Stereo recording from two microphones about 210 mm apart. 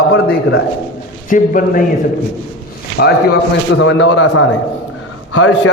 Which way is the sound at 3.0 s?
55° left (ahead or behind).